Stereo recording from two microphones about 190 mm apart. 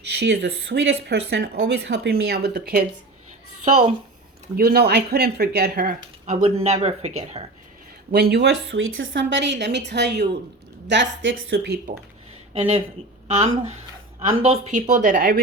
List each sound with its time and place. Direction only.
0.2 s speech: 60° right (ahead or behind)
4.5 s a woman's voice: 55° right (ahead or behind); by 7.4 s 35° right (ahead or behind)
8.1 s a woman's voice: 60° right (ahead or behind)
13.2 s a woman's voice: 35° right (ahead or behind)